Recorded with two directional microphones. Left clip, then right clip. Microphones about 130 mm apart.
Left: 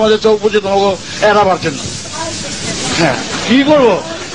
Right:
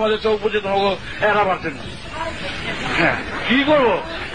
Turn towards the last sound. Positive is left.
turn(degrees=-45)  # may be behind; listen again after turning